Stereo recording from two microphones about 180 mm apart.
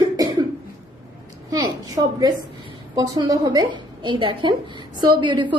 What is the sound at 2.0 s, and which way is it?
A woman's voice, 25° right (ahead or behind).